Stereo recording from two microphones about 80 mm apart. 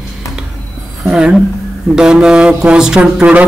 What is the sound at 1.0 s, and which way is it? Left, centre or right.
A woman's voice, centre.